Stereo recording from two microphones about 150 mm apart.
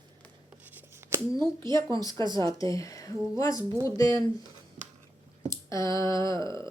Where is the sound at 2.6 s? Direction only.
20° left (ahead or behind).